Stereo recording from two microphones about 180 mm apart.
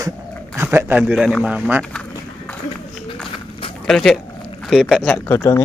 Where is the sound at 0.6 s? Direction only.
10° right (ahead or behind).